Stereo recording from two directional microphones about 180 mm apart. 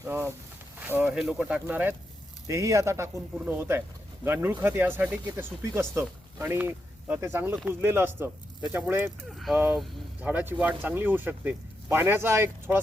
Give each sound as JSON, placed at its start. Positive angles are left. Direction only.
{"t": 0.0, "sound": "speech", "side_deg": -15}
{"t": 9.3, "sound": "speech", "side_deg": 0}